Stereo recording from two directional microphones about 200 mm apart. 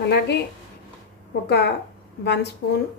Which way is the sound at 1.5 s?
55° left (ahead or behind).